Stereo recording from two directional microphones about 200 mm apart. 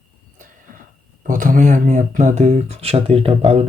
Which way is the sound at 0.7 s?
45° right (ahead or behind).